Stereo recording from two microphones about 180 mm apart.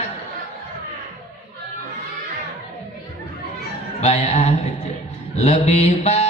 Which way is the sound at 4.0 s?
35° left (ahead or behind).